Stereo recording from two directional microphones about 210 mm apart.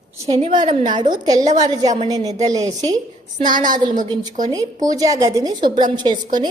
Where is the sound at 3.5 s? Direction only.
40° right (ahead or behind).